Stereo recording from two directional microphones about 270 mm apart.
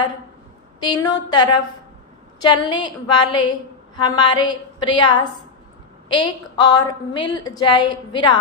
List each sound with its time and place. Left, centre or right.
0.9 s a woman's voice: centre